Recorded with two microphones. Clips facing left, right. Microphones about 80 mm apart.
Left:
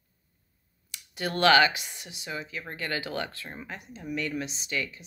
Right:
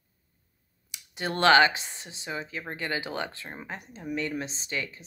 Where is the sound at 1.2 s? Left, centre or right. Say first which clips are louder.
Right 1 dB; right.